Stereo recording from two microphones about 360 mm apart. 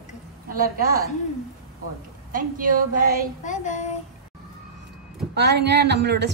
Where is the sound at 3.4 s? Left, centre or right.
Centre.